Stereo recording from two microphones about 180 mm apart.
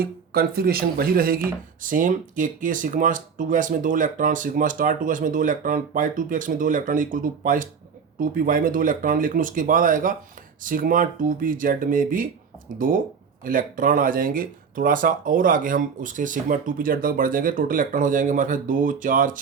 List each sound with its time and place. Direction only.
0.0 s speech: 55° right (ahead or behind)
13.4 s speech: 50° right (ahead or behind)